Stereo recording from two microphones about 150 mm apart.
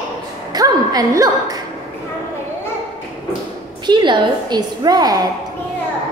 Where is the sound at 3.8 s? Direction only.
30° right (ahead or behind).